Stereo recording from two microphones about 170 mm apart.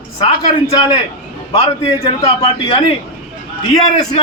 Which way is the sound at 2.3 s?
35° left (ahead or behind).